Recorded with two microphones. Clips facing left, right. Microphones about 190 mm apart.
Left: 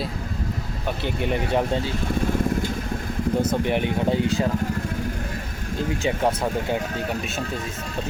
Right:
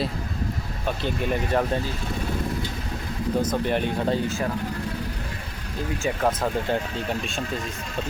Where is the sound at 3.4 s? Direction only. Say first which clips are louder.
Left 2 dB; 15° left (ahead or behind).